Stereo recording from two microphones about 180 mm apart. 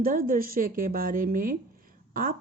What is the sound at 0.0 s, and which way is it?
A woman's voice, 50° right (ahead or behind).